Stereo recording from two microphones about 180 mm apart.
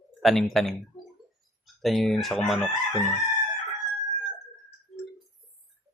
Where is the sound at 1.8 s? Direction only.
Centre (ahead or behind).